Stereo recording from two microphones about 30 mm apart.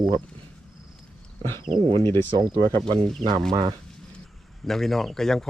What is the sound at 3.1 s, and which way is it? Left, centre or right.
Speech, centre.